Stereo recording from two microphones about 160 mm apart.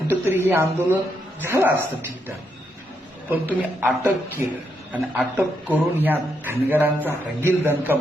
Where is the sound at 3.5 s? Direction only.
10° right (ahead or behind).